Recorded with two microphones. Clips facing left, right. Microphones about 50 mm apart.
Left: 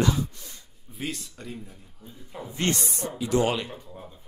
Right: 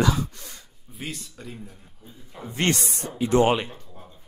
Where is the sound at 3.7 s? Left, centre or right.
Centre.